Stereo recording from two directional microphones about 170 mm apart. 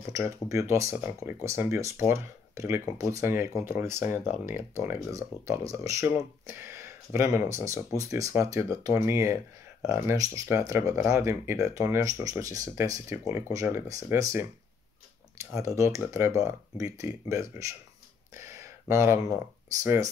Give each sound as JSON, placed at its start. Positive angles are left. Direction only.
{"t": 0.1, "sound": "speech", "side_deg": -20}
{"t": 4.1, "sound": "speech", "side_deg": 45}
{"t": 4.6, "sound": "speech", "side_deg": -15}
{"t": 15.3, "sound": "speech", "side_deg": -15}
{"t": 18.3, "sound": "a sound", "side_deg": -15}
{"t": 19.8, "sound": "speech", "side_deg": -20}